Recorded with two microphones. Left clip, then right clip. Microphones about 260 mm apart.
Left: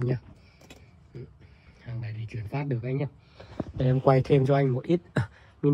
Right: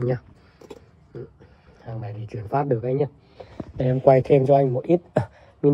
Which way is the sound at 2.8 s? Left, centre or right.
Centre.